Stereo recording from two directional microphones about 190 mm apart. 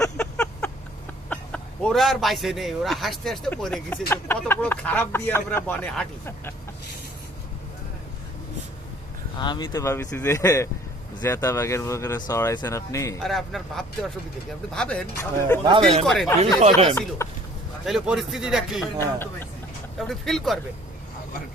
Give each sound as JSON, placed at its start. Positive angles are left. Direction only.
{"t": 0.2, "sound": "a sound", "side_deg": 5}
{"t": 1.3, "sound": "speech", "side_deg": 5}
{"t": 9.4, "sound": "speech", "side_deg": 25}
{"t": 13.1, "sound": "speech", "side_deg": 0}
{"t": 15.6, "sound": "speech", "side_deg": -25}
{"t": 16.0, "sound": "speech", "side_deg": 0}
{"t": 16.4, "sound": "speech", "side_deg": -35}
{"t": 17.2, "sound": "speech", "side_deg": 15}
{"t": 17.8, "sound": "speech", "side_deg": -5}
{"t": 18.9, "sound": "speech", "side_deg": 10}
{"t": 20.0, "sound": "speech", "side_deg": 0}